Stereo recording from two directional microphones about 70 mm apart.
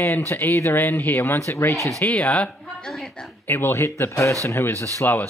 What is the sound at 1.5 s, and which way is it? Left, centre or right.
Speech, left.